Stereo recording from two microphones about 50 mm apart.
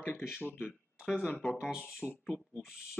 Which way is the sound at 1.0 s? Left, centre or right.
Centre.